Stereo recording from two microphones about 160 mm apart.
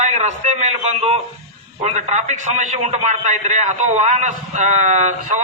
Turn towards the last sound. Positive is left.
turn(degrees=-50)  # may be behind; listen again after turning